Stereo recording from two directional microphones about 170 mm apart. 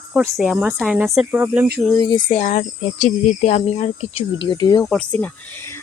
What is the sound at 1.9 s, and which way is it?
Speech, 20° left (ahead or behind).